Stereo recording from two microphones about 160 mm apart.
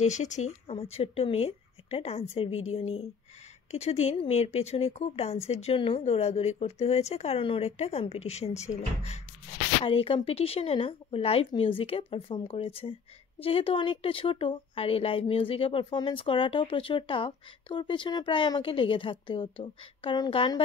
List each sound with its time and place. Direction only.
0.0 s speech: 45° left (ahead or behind); by 20.6 s 30° left (ahead or behind)